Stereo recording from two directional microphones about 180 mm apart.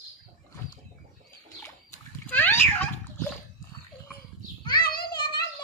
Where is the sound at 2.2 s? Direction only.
10° left (ahead or behind).